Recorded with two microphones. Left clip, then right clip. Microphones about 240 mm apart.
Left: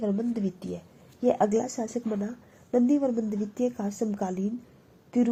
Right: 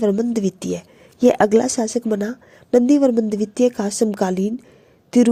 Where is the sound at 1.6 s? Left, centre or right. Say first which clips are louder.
Right 11 dB; right.